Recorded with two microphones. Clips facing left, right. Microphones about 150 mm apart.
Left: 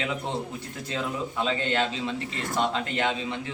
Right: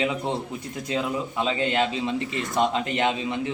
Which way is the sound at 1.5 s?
15° right (ahead or behind).